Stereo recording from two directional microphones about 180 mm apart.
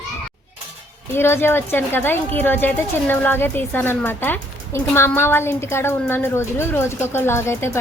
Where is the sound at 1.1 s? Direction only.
15° left (ahead or behind).